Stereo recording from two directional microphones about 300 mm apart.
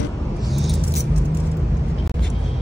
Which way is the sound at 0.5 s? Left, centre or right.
Centre.